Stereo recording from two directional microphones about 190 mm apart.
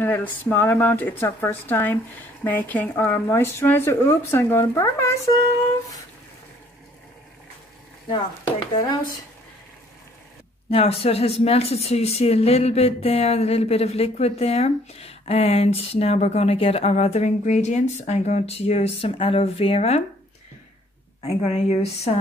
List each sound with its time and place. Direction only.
0.0 s speech: 10° left (ahead or behind)
8.7 s speech: 20° left (ahead or behind)
10.7 s a woman's voice: 30° left (ahead or behind)
21.2 s a woman's voice: 35° left (ahead or behind)